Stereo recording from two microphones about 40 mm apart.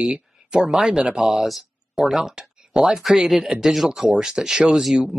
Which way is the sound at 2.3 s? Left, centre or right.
Centre.